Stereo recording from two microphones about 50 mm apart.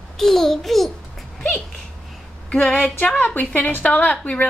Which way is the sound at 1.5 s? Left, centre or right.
Centre.